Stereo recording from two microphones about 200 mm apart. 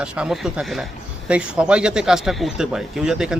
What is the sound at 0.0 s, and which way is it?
A man's voice, 5° right (ahead or behind).